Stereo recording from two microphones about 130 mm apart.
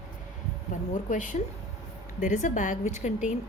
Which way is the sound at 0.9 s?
80° left.